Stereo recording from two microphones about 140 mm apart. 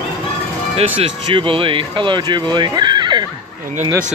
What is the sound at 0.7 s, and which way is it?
Speech, 40° right (ahead or behind).